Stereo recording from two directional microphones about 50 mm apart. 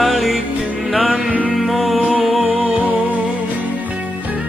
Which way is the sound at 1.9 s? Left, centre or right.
Right.